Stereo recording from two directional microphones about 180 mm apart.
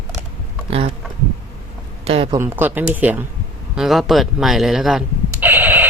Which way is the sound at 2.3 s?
15° right (ahead or behind).